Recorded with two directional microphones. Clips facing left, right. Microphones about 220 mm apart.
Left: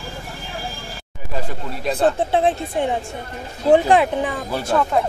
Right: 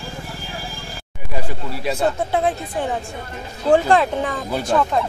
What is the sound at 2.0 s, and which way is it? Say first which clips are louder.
Speech: left 3 dB; 30° left (ahead or behind).